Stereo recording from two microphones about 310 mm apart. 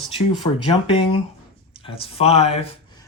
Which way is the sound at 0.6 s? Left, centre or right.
Centre.